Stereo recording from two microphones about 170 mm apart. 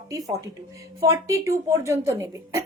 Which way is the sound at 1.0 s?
15° right (ahead or behind).